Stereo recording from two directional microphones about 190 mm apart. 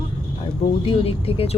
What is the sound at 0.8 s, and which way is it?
Speech, 30° left (ahead or behind).